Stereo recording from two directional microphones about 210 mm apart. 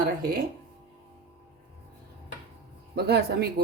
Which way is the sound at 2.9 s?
50° right (ahead or behind).